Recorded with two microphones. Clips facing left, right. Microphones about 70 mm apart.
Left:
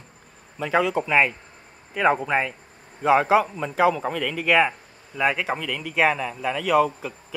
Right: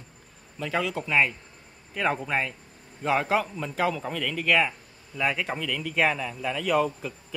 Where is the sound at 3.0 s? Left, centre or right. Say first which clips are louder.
Left 7 dB; centre.